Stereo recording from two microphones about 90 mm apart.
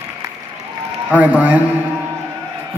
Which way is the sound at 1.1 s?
15° right (ahead or behind).